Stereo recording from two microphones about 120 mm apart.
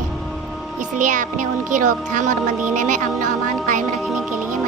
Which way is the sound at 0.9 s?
90° right.